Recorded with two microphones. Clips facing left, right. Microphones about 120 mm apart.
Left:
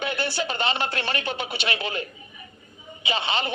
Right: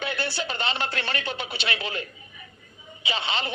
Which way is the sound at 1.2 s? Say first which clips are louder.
Left 3 dB; 50° left (ahead or behind).